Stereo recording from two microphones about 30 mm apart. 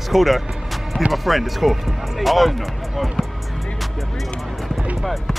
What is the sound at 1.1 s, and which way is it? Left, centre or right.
Speech, centre.